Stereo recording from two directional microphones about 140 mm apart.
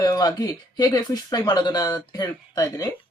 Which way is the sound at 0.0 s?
25° left (ahead or behind).